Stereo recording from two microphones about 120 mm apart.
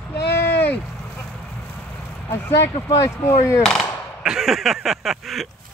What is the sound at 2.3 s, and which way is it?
Speech, 20° left (ahead or behind).